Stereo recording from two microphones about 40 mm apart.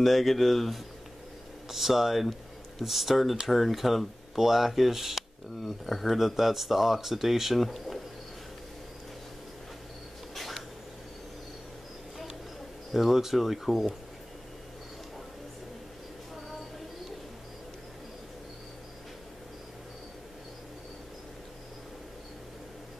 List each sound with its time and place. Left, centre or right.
0.0 s speech: centre
10.3 s cat: centre
12.9 s speech: centre